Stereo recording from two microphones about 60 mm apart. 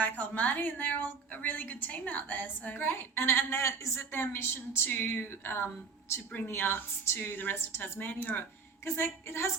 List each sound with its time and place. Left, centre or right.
0.0 s a woman's voice: left
4.9 s a woman's voice: left
8.8 s a woman's voice: left